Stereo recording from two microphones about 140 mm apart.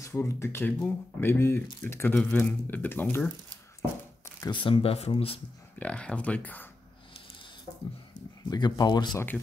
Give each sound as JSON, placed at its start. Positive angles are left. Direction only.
{"t": 0.0, "sound": "speech", "side_deg": 20}
{"t": 4.5, "sound": "speech", "side_deg": 35}
{"t": 5.8, "sound": "speech", "side_deg": 10}
{"t": 8.5, "sound": "speech", "side_deg": 30}